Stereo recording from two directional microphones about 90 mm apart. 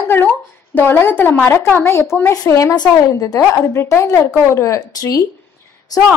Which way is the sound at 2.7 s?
45° left (ahead or behind).